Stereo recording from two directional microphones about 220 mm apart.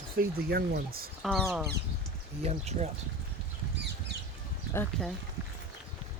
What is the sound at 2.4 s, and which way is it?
Speech, 30° right (ahead or behind).